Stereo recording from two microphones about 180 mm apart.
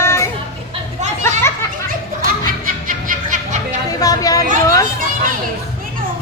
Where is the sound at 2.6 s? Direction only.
45° right (ahead or behind).